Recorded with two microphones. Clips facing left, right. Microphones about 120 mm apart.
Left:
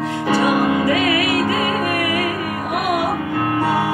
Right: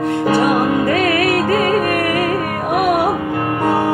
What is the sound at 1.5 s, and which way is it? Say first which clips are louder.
Music: right 4 dB; 50° right (ahead or behind).